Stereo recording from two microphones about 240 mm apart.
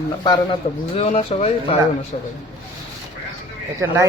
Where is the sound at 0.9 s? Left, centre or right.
Left.